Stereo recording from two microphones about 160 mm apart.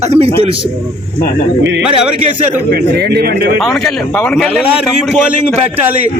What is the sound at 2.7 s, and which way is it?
Speech, 75° right (ahead or behind).